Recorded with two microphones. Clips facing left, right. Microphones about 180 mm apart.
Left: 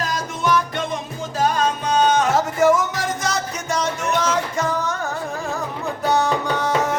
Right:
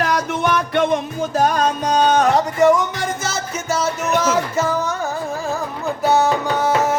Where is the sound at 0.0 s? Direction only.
65° right (ahead or behind); by 2.0 s 50° right (ahead or behind).